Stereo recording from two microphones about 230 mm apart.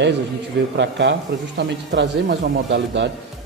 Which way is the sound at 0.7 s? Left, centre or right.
Right.